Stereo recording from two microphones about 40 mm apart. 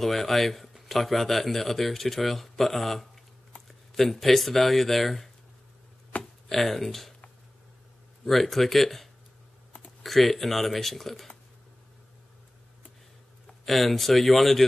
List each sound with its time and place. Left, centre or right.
0.0 s speech: centre
6.1 s a sound: left
6.5 s speech: centre
8.3 s speech: centre
13.7 s speech: centre